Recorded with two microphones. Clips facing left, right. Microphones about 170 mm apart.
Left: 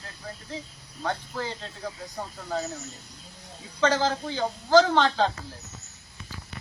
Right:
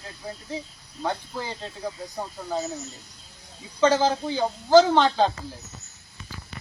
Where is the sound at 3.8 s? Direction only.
15° right (ahead or behind).